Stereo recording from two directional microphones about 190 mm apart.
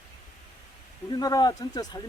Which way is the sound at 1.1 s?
20° left (ahead or behind).